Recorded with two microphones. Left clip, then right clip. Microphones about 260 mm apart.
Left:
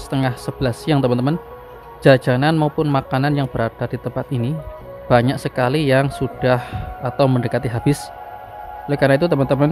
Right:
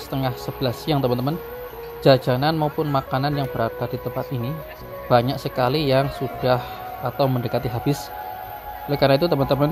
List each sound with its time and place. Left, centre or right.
0.1 s speech: centre